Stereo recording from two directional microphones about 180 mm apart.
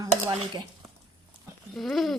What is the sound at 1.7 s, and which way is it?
Speech, centre (ahead or behind).